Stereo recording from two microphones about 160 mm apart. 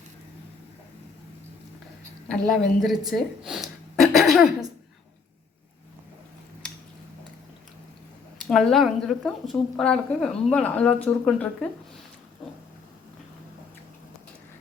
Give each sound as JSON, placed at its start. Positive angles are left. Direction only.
{"t": 2.2, "sound": "speech", "side_deg": 0}
{"t": 4.3, "sound": "throat clearing", "side_deg": -5}
{"t": 8.4, "sound": "speech", "side_deg": 0}